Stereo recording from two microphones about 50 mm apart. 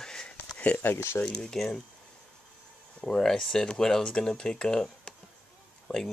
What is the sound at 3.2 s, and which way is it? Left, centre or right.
Speech, centre.